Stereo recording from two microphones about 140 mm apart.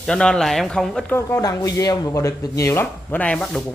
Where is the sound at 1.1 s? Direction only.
20° left (ahead or behind).